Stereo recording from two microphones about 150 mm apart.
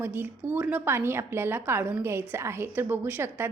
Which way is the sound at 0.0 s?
15° right (ahead or behind).